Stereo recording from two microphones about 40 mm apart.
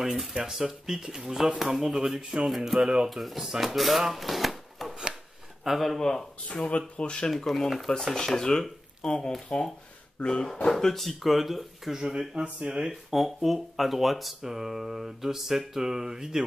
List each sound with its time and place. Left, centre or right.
0.0 s speech: centre
3.4 s speech: centre
3.7 s speech: centre
6.5 s speech: left
7.2 s speech: centre
11.9 s speech: centre
13.1 s speech: centre